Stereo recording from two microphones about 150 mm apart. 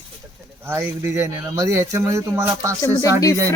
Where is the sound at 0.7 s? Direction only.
20° right (ahead or behind).